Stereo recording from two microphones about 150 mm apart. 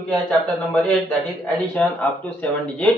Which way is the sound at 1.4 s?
10° left (ahead or behind).